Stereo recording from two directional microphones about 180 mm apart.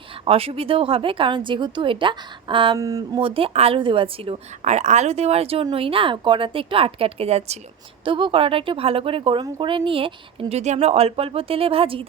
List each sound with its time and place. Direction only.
0.3 s a woman's voice: 30° right (ahead or behind)